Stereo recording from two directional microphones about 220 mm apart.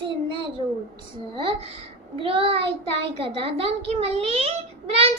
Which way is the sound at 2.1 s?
25° right (ahead or behind).